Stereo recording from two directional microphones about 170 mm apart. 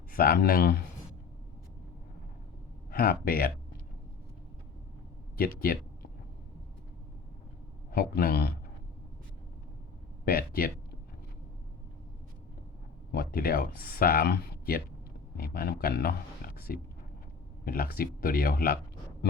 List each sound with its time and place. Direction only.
0.1 s speech: 60° left (ahead or behind)
2.9 s speech: 60° left (ahead or behind)
5.4 s speech: 60° left (ahead or behind)
7.9 s a man's voice: 65° left (ahead or behind)
10.2 s speech: 60° left (ahead or behind)
13.1 s speech: 60° left (ahead or behind)